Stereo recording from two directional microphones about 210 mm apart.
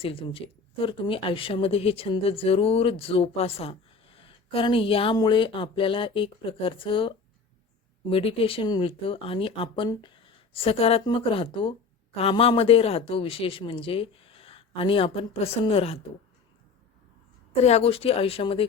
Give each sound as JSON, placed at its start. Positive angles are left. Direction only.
{"t": 0.0, "sound": "speech", "side_deg": 25}
{"t": 8.1, "sound": "speech", "side_deg": 25}
{"t": 17.5, "sound": "speech", "side_deg": 30}